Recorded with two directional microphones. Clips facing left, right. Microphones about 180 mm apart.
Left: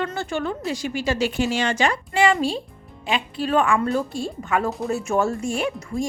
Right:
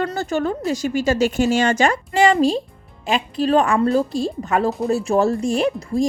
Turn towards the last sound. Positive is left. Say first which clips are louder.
# right 6 dB
turn(degrees=-35)  # may be behind; listen again after turning